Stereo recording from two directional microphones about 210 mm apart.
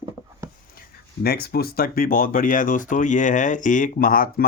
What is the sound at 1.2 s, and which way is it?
Speech, 45° left (ahead or behind).